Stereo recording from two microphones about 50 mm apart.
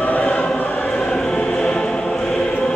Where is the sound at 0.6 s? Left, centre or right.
Left.